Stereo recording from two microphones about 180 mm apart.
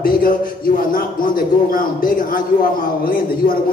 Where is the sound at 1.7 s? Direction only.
50° left (ahead or behind).